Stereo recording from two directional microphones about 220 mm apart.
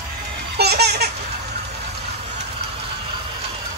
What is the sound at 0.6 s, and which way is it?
Baby laughter, 45° right (ahead or behind).